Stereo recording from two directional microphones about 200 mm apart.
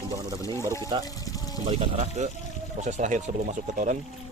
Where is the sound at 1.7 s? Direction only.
30° right (ahead or behind).